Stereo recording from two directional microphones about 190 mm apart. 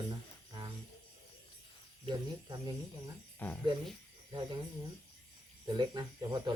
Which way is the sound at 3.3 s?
10° left (ahead or behind).